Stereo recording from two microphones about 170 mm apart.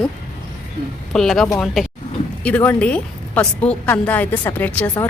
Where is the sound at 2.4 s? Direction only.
10° left (ahead or behind).